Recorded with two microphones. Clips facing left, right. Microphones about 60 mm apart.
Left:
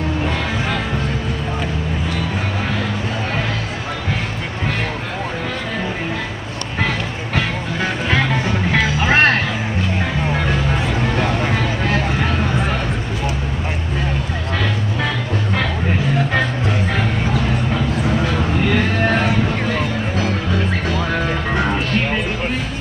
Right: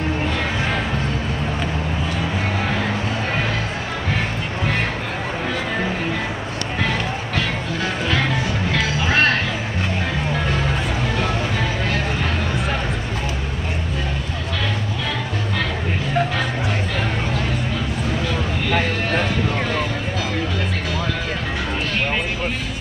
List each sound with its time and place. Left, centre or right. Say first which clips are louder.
8.7 s music: left 4 dB; left